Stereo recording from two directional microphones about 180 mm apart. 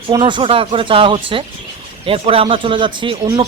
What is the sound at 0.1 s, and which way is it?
Speech, 25° right (ahead or behind).